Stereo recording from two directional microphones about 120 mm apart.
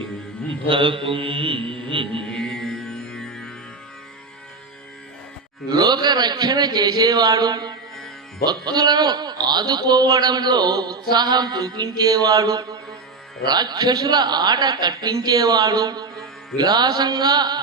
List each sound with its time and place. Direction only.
0.7 s mantra: 45° right (ahead or behind)
2.2 s music: 5° left (ahead or behind)
5.6 s a man's voice: 35° right (ahead or behind)